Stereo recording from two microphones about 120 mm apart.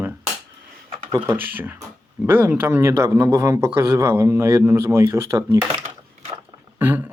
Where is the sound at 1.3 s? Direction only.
15° right (ahead or behind).